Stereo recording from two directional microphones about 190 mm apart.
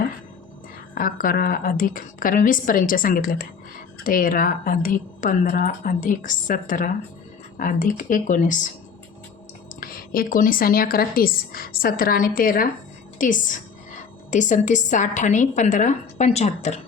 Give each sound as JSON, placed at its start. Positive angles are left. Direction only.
{"t": 0.9, "sound": "a woman's voice", "side_deg": 45}
{"t": 9.8, "sound": "a woman's voice", "side_deg": 50}